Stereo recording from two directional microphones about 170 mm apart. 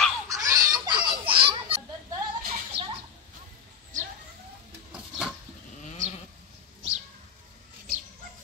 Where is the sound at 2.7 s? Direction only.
80° right.